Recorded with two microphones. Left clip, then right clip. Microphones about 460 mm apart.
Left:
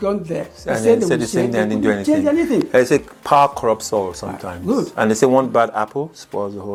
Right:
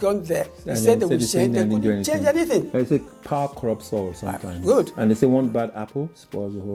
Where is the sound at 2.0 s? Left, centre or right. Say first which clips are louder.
Left 1 dB; right.